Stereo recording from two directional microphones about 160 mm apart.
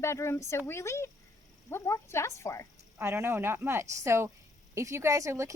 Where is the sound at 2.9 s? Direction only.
15° right (ahead or behind).